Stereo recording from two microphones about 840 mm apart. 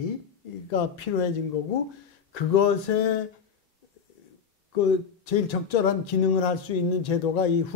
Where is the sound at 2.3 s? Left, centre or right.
Left.